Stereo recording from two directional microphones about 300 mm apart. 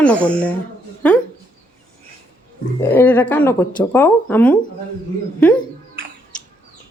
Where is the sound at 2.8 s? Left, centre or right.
Centre.